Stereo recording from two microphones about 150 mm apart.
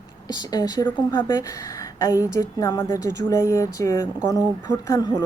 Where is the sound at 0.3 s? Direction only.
25° left (ahead or behind).